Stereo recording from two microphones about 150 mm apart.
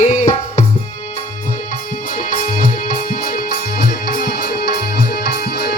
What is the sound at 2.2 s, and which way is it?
Music, 70° left (ahead or behind).